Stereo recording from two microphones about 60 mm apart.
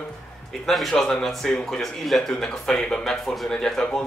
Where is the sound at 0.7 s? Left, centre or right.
Centre.